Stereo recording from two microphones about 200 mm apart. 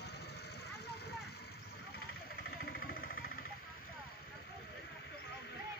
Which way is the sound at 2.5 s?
50° left (ahead or behind).